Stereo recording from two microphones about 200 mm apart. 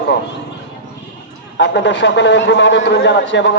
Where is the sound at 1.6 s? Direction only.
65° left (ahead or behind).